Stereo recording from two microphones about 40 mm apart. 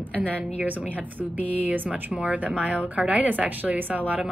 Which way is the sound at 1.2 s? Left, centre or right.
Right.